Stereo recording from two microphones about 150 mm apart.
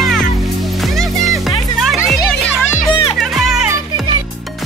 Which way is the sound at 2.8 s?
30° left (ahead or behind).